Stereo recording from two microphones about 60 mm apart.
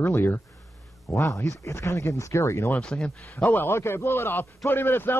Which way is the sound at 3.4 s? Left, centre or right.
Left.